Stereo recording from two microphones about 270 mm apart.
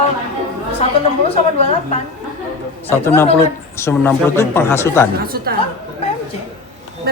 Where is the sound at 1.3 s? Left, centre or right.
Left.